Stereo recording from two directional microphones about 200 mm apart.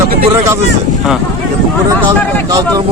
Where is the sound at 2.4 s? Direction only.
15° right (ahead or behind).